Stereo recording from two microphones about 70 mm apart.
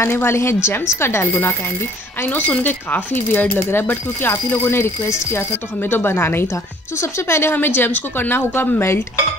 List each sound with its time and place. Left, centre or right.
0.0 s speech: left
2.2 s speech: left